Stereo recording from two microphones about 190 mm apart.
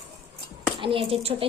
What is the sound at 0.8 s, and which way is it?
Speech, 30° right (ahead or behind).